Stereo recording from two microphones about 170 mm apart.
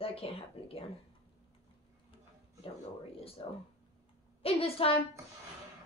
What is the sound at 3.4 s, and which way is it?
Speech, 30° left (ahead or behind).